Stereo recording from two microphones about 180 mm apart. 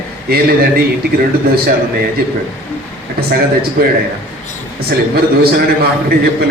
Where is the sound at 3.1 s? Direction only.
60° right (ahead or behind).